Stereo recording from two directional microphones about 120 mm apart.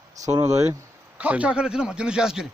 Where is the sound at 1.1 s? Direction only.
10° right (ahead or behind).